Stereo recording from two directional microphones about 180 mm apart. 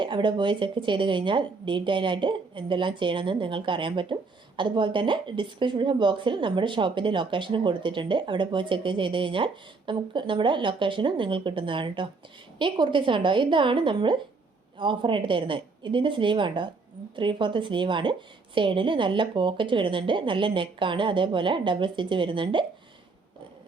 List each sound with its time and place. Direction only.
0.0 s speech: 25° right (ahead or behind)